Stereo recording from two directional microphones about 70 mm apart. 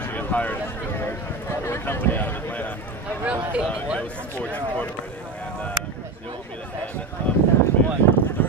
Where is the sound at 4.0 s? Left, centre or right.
Left.